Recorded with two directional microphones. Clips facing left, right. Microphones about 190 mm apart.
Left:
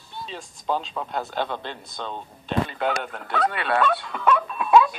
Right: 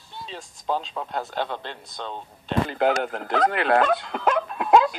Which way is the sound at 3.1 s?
55° right (ahead or behind).